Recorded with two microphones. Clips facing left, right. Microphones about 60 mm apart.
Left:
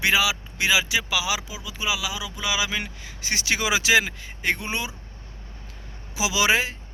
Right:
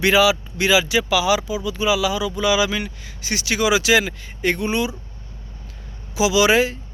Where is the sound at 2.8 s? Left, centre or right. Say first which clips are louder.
Right 3 dB; left.